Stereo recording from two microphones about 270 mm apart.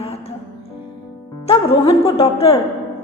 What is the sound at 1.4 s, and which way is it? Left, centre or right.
A woman's voice, left.